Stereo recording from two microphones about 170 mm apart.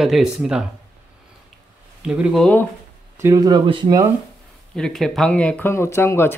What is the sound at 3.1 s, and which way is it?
Speech, 20° right (ahead or behind).